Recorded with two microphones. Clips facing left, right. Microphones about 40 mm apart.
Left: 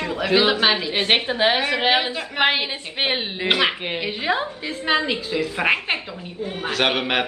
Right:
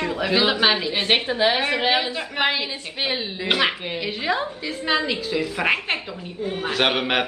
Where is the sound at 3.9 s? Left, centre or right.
Centre.